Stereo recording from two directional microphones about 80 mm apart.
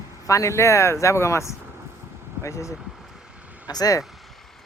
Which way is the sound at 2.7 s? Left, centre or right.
Centre.